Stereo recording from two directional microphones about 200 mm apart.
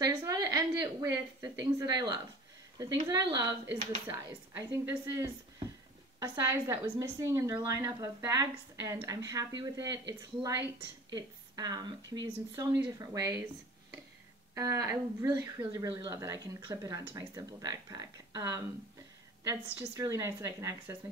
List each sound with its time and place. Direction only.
0.0 s a woman's voice: 15° right (ahead or behind)
14.5 s a woman's voice: 15° right (ahead or behind)